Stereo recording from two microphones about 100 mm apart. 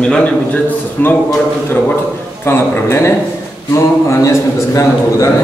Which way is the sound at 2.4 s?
25° left (ahead or behind).